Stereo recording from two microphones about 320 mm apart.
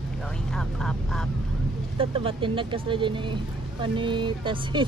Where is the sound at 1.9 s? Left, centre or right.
Centre.